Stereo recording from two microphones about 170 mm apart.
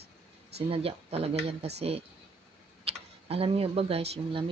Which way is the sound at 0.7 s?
35° right (ahead or behind).